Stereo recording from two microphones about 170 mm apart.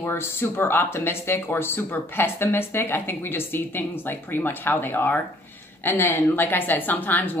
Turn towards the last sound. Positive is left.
turn(degrees=10)  # may be behind; listen again after turning